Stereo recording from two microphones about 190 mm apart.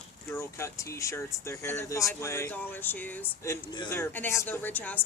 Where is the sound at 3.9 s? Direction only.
10° left (ahead or behind).